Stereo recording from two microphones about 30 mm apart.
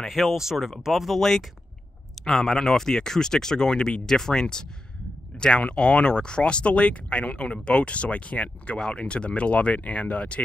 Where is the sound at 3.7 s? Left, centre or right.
Left.